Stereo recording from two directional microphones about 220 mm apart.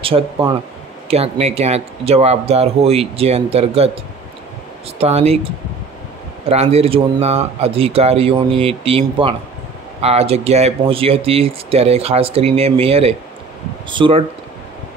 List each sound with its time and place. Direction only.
0.0 s speech: 20° right (ahead or behind)
6.5 s speech: 30° right (ahead or behind)